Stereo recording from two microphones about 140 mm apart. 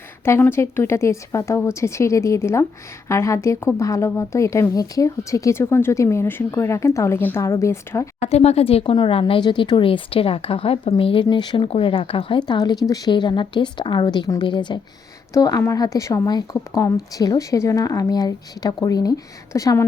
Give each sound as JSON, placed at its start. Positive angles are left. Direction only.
{"t": 0.3, "sound": "speech", "side_deg": 15}
{"t": 8.2, "sound": "speech", "side_deg": 50}